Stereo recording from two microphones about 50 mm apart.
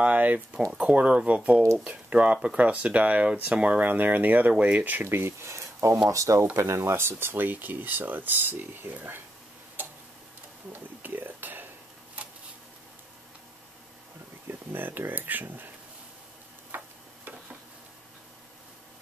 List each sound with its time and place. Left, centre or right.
0.0 s speech: right
3.8 s speech: right
5.1 s speech: right
6.0 s speech: right
9.8 s tick-tock: right
10.7 s a sound: right
14.5 s speech: right
16.7 s tick-tock: right